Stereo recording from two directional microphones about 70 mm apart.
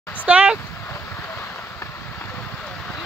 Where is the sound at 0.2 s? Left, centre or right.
Centre.